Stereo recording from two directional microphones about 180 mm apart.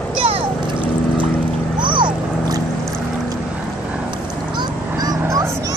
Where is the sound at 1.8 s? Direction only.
25° right (ahead or behind).